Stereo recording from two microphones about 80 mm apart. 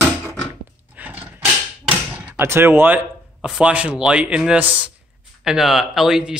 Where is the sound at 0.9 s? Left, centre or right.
Right.